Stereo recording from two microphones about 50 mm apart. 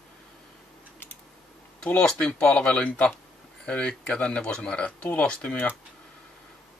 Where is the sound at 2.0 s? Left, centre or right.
Centre.